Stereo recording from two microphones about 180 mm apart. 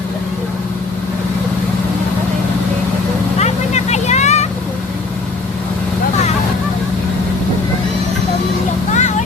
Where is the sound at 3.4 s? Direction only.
40° left (ahead or behind).